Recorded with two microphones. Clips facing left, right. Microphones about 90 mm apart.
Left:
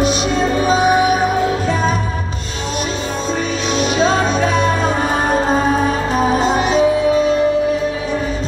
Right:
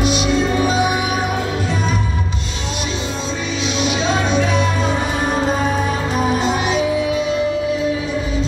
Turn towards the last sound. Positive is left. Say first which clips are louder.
# left 4 dB
turn(degrees=40)  # may be behind; listen again after turning